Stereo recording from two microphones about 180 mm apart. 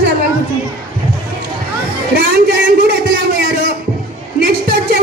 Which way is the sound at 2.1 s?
60° right (ahead or behind).